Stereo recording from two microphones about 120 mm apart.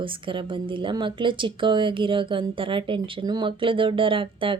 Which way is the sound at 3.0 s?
35° right (ahead or behind).